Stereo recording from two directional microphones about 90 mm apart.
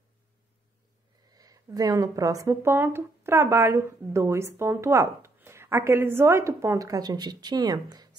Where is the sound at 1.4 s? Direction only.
45° right (ahead or behind).